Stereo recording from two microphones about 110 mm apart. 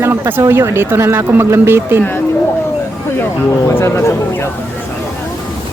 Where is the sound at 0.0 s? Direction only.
20° right (ahead or behind).